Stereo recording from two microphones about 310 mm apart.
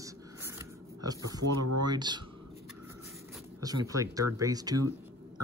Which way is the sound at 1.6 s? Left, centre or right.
Right.